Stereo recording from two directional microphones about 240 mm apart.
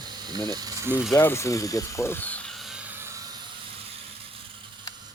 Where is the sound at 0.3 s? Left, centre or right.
Centre.